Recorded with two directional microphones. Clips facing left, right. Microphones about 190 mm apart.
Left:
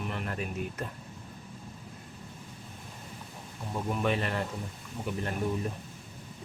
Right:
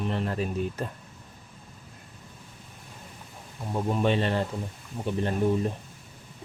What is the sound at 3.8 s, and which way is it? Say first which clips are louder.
Speech: right 5 dB; 30° right (ahead or behind).